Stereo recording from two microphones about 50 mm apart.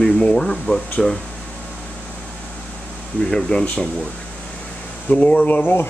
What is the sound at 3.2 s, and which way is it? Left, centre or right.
Speech, centre.